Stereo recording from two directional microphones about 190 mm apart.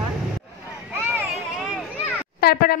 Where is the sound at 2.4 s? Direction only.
50° left (ahead or behind).